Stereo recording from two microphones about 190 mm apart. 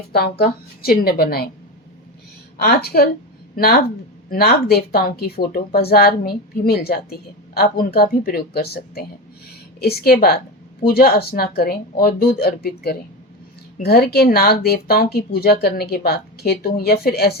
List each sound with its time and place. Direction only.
0.1 s speech: 55° left (ahead or behind)
2.6 s speech: 55° left (ahead or behind)